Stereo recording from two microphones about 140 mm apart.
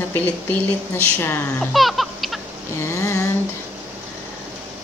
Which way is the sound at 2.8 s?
20° left (ahead or behind).